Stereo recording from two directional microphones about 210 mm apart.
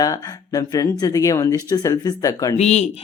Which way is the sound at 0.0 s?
15° left (ahead or behind).